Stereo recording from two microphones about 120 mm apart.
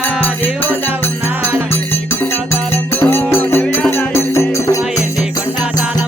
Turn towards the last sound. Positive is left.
turn(degrees=25)  # may be behind; listen again after turning